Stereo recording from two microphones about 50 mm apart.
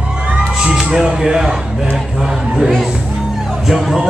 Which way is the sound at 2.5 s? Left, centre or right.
Centre.